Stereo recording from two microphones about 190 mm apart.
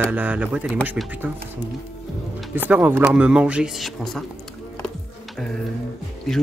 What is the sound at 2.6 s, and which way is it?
Speech, 10° right (ahead or behind).